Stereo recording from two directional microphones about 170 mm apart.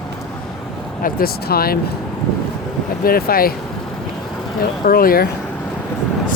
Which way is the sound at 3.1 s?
60° left (ahead or behind).